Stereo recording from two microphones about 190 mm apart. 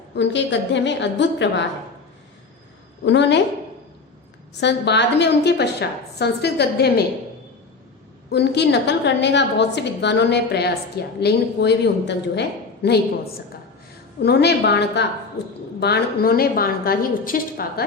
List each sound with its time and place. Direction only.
0.1 s a woman's voice: 70° left (ahead or behind)
3.0 s a woman's voice: 65° left (ahead or behind)
4.6 s a woman's voice: 65° left (ahead or behind)
8.3 s a woman's voice: 60° left (ahead or behind)
14.2 s a woman's voice: 60° left (ahead or behind)